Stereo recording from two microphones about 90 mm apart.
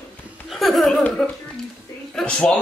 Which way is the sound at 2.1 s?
10° left (ahead or behind).